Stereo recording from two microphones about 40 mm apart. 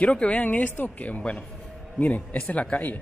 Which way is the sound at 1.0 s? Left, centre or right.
Left.